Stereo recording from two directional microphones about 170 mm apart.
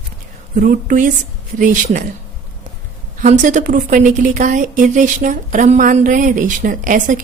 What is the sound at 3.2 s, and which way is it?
A woman's voice, 45° right (ahead or behind).